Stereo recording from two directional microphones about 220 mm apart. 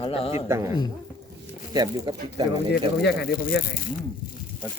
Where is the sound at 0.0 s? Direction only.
25° left (ahead or behind).